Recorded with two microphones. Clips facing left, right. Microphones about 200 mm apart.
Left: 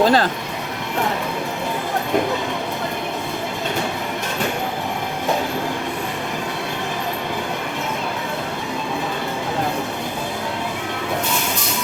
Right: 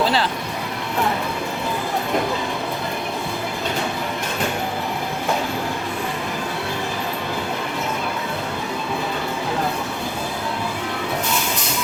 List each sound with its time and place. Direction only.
0.0 s speech: 45° left (ahead or behind)